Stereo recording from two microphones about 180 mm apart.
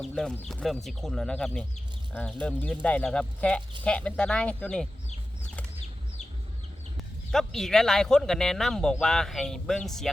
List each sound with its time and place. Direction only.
0.0 s speech: 5° left (ahead or behind)
6.9 s speech: centre (ahead or behind)